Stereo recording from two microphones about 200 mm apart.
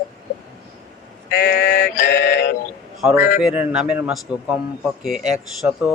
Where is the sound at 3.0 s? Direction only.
Centre (ahead or behind).